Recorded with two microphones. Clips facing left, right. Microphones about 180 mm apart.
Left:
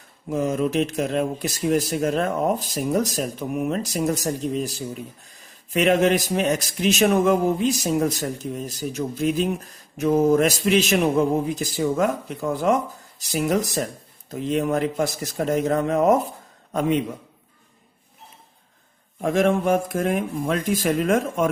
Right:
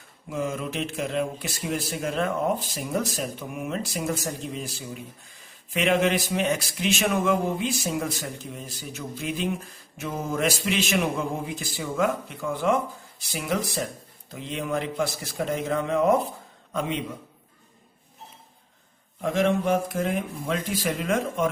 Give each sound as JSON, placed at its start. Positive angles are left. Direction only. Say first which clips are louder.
{"t": 0.3, "sound": "speech", "louder": "left 7 dB", "side_deg": 40}
{"t": 19.2, "sound": "speech", "louder": "left 3 dB", "side_deg": 50}